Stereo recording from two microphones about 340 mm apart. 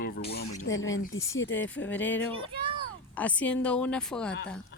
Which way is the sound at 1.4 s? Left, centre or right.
Left.